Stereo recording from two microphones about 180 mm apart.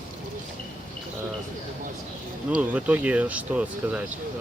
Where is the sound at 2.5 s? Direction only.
5° right (ahead or behind).